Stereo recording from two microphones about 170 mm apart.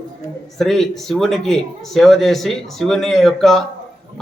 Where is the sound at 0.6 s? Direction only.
Centre (ahead or behind).